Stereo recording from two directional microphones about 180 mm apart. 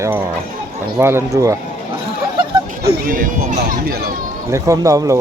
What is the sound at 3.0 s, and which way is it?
Speech, 50° right (ahead or behind).